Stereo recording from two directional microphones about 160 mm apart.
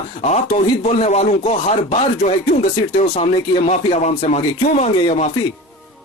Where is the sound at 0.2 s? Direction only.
45° left (ahead or behind).